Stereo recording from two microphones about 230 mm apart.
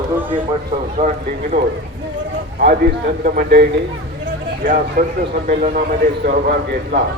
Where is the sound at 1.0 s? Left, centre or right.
Right.